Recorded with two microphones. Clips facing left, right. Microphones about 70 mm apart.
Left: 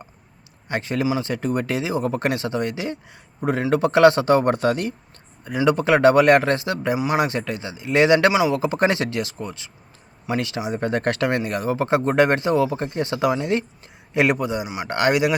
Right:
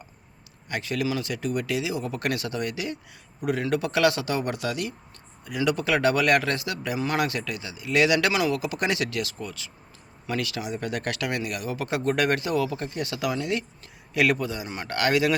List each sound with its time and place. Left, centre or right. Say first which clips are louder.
0.7 s speech: left 5 dB; left
8.6 s speech: left 7 dB; left